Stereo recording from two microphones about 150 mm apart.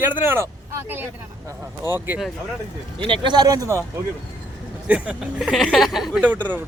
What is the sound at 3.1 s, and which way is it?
Speech, 30° right (ahead or behind).